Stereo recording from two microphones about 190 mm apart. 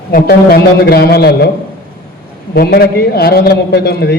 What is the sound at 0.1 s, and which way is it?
A man's voice, 50° left (ahead or behind).